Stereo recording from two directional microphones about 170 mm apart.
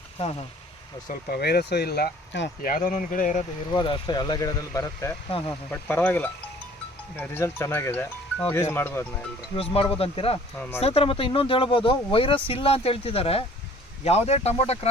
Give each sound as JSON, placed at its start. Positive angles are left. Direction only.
{"t": 0.2, "sound": "speech", "side_deg": 35}
{"t": 1.0, "sound": "speech", "side_deg": 65}
{"t": 2.6, "sound": "speech", "side_deg": 55}
{"t": 3.7, "sound": "speech", "side_deg": 25}
{"t": 9.6, "sound": "speech", "side_deg": 35}